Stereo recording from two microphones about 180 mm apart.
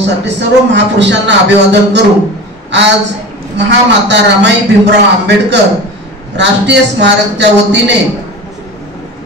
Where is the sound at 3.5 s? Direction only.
75° right (ahead or behind).